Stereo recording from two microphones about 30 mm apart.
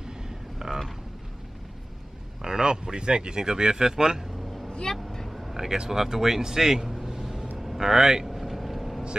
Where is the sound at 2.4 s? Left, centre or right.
Right.